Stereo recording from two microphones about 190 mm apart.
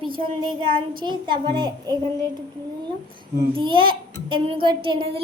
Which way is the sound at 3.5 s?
25° right (ahead or behind).